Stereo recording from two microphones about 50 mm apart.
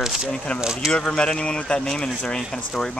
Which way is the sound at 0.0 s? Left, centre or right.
Centre.